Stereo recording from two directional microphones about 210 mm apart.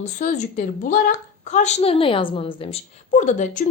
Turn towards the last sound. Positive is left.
turn(degrees=35)  # may be behind; listen again after turning